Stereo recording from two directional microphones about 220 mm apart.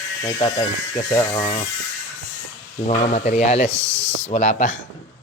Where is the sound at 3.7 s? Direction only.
55° left (ahead or behind).